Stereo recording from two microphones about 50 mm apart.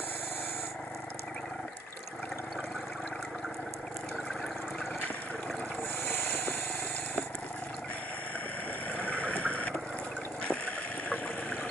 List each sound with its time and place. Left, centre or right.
8.9 s boat: left
10.4 s water: left